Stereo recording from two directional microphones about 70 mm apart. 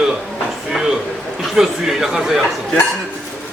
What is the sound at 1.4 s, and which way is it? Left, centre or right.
A man's voice, centre.